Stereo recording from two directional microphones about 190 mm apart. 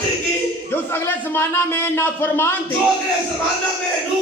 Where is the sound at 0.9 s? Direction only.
10° left (ahead or behind).